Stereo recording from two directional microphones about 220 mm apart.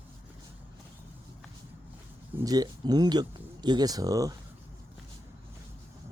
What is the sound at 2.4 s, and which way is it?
Speech, 15° right (ahead or behind).